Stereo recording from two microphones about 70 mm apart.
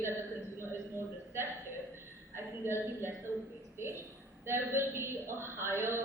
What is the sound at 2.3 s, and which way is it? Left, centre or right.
Speech, right.